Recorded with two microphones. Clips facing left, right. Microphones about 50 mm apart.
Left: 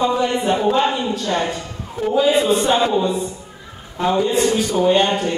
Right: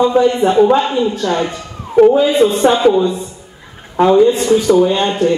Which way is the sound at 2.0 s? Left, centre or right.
Right.